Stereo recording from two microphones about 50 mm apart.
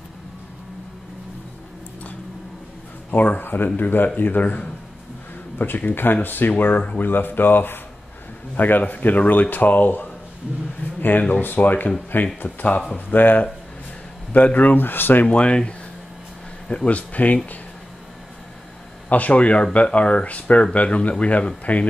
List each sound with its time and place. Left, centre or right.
3.1 s speech: left
12.4 s speech: left
12.9 s speech: left
15.2 s speech: left
19.0 s speech: left